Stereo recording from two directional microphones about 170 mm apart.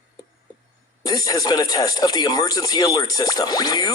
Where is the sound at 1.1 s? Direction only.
20° left (ahead or behind).